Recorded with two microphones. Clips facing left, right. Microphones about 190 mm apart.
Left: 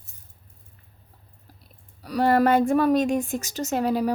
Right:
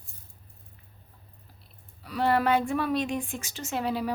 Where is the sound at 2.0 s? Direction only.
40° left (ahead or behind).